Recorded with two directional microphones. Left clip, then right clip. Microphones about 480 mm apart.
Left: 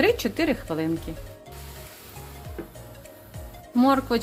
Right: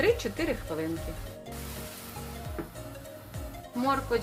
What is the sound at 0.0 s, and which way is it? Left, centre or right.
Speech, centre.